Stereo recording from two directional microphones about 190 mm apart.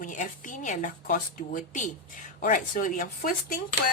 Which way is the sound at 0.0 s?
40° left (ahead or behind).